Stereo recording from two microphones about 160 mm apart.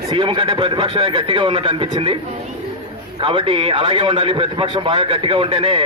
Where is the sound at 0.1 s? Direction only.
30° right (ahead or behind).